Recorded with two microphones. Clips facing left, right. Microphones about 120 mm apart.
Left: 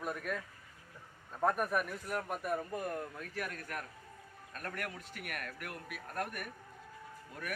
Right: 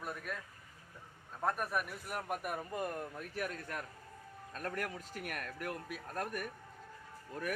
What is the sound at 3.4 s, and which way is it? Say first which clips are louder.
A man's voice: right 1 dB; 20° right (ahead or behind).